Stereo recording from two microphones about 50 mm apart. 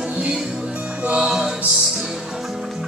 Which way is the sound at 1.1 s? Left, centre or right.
Centre.